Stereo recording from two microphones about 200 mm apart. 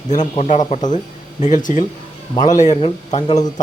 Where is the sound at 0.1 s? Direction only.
35° left (ahead or behind).